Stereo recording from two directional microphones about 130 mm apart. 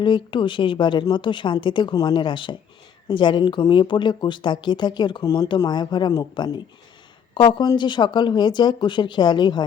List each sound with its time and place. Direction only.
0.0 s speech: 40° left (ahead or behind)